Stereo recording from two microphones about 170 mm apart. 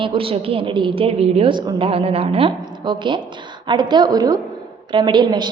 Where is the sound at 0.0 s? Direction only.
30° right (ahead or behind).